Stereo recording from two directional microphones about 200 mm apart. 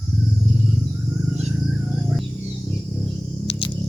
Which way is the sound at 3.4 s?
25° left (ahead or behind).